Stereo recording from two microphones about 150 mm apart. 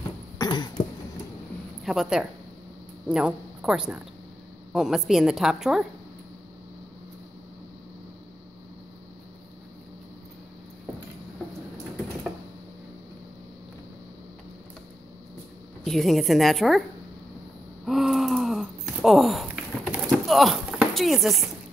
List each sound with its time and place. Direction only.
0.4 s cough: 30° left (ahead or behind)
1.8 s a woman's voice: 5° right (ahead or behind)
15.8 s a woman's voice: centre (ahead or behind)
17.8 s a sound: centre (ahead or behind)
20.1 s clip-clop: centre (ahead or behind)